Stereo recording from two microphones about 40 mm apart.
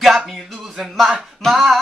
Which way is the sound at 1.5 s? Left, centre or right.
Centre.